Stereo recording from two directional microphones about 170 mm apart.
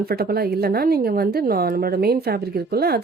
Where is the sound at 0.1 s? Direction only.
65° right (ahead or behind).